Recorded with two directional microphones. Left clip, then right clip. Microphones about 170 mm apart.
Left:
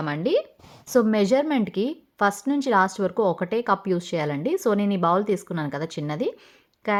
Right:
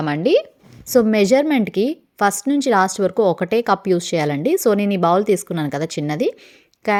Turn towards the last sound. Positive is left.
turn(degrees=-35)  # may be behind; listen again after turning